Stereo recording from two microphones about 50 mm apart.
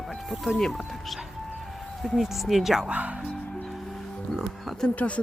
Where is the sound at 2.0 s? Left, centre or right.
Centre.